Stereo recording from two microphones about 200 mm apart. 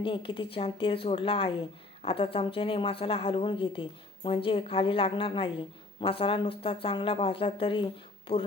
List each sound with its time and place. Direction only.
0.0 s a woman's voice: 25° left (ahead or behind)